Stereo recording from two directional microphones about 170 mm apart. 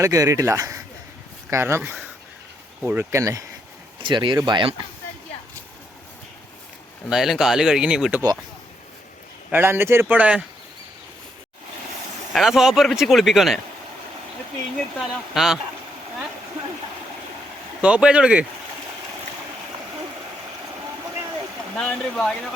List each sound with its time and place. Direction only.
0.0 s speech: 20° right (ahead or behind)
4.0 s speech: 30° right (ahead or behind)
7.1 s speech: centre (ahead or behind)
9.5 s speech: 10° right (ahead or behind)
12.3 s speech: centre (ahead or behind)
14.8 s speech: centre (ahead or behind)
17.8 s speech: 5° right (ahead or behind)
21.8 s speech: 5° left (ahead or behind)